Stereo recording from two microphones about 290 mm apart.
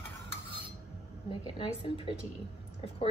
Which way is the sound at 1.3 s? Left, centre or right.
Centre.